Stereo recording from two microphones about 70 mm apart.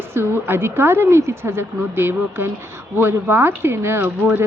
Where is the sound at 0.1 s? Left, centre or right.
Right.